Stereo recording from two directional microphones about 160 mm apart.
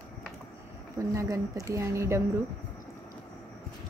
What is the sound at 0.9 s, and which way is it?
Speech, 20° right (ahead or behind).